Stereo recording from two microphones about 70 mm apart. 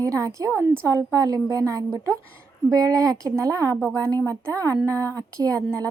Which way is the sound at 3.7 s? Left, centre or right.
Centre.